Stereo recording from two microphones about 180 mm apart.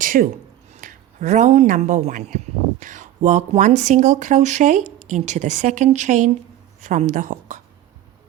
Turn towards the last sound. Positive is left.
turn(degrees=-45)  # may be behind; listen again after turning